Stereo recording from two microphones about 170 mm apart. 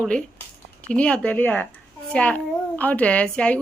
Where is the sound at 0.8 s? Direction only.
5° left (ahead or behind).